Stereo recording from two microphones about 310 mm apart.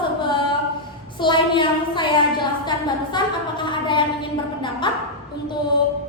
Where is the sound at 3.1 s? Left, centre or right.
Centre.